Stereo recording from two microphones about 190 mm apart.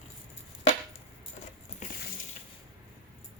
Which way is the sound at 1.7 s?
45° left (ahead or behind).